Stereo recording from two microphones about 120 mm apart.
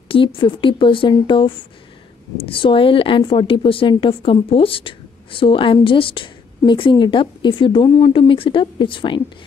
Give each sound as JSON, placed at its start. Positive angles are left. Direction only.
{"t": 0.1, "sound": "a woman's voice", "side_deg": 45}